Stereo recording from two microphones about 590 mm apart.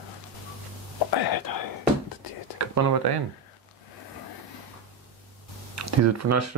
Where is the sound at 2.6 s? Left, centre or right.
Right.